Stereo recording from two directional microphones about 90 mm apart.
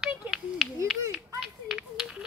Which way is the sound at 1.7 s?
10° right (ahead or behind).